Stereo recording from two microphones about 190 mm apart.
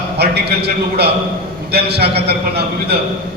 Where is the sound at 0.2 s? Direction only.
60° right (ahead or behind).